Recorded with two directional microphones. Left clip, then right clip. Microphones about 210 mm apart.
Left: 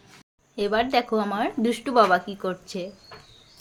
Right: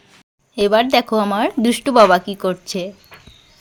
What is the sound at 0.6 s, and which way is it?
Speech, 55° right (ahead or behind).